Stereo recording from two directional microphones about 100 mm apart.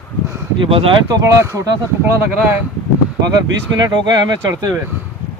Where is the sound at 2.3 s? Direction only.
15° right (ahead or behind).